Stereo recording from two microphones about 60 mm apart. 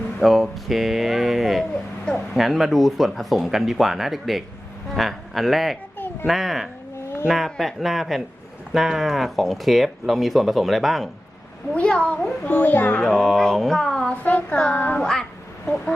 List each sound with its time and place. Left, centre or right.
0.2 s speech: centre
1.7 s a sound: centre
2.3 s speech: centre
11.7 s child singing: centre
12.5 s speech: left
13.0 s speech: centre
14.1 s child singing: left
14.9 s speech: centre